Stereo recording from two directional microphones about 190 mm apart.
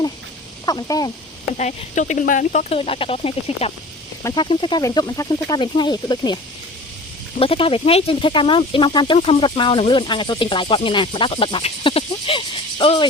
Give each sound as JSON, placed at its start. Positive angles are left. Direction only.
{"t": 0.6, "sound": "speech", "side_deg": 20}
{"t": 1.5, "sound": "speech", "side_deg": 40}
{"t": 4.2, "sound": "speech", "side_deg": 20}